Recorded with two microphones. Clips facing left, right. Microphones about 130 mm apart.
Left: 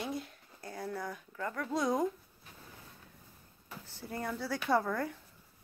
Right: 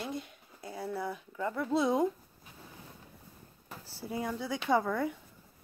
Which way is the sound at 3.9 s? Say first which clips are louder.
Right 3 dB; 5° right (ahead or behind).